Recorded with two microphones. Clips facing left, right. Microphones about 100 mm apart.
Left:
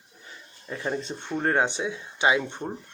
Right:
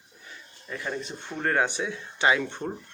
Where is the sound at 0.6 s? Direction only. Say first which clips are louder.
Left 3 dB; 25° left (ahead or behind).